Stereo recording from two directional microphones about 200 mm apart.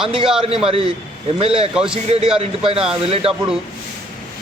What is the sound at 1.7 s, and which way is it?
Speech, 5° right (ahead or behind).